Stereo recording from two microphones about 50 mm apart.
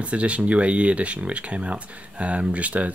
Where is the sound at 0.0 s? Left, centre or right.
Right.